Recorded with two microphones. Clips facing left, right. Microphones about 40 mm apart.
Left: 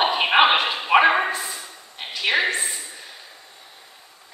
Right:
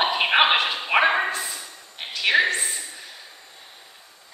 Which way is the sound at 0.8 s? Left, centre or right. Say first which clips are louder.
Left 6 dB; centre.